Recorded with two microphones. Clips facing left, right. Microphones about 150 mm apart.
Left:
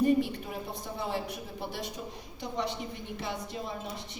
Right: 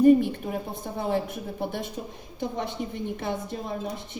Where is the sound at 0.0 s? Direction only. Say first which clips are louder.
Right 8 dB; 50° right (ahead or behind).